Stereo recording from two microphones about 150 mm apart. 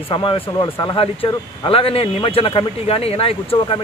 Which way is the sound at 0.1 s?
35° left (ahead or behind).